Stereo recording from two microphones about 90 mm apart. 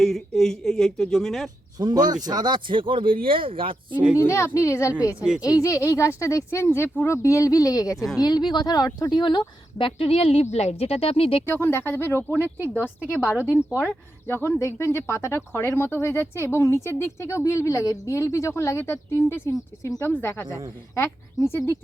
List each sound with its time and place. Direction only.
0.0 s speech: centre (ahead or behind)
1.8 s speech: 50° right (ahead or behind); by 4.0 s 75° right (ahead or behind)
4.3 s speech: 30° left (ahead or behind)
7.2 s speech: 35° left (ahead or behind)
7.9 s speech: centre (ahead or behind)
8.2 s speech: 50° left (ahead or behind); by 11.4 s 90° left
11.4 s speech: 25° left (ahead or behind)
12.3 s speech: 20° right (ahead or behind)
13.1 s a woman's voice: 15° left (ahead or behind)
13.7 s speech: 10° right (ahead or behind)
14.3 s speech: 25° left (ahead or behind)